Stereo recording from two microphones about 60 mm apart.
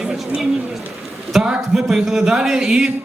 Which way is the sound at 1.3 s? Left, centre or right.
Centre.